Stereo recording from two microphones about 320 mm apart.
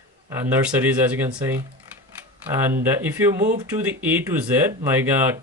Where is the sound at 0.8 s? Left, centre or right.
Centre.